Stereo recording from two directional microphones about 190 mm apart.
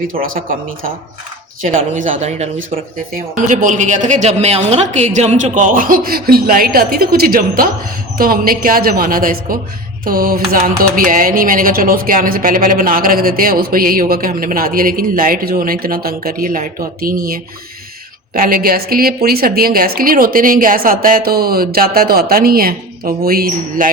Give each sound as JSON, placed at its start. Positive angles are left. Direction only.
{"t": 0.1, "sound": "a woman's voice", "side_deg": -50}